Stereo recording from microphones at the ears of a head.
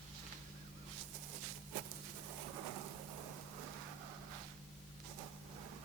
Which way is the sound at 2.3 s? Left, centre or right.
Right.